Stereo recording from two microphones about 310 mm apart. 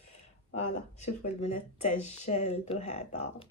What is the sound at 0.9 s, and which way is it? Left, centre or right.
Speech, left.